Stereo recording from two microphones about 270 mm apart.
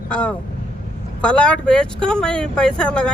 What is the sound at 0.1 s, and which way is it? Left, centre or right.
Speech, centre.